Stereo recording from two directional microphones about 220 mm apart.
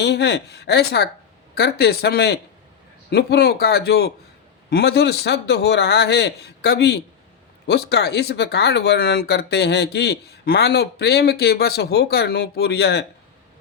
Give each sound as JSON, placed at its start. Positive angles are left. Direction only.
{"t": 0.0, "sound": "speech", "side_deg": 50}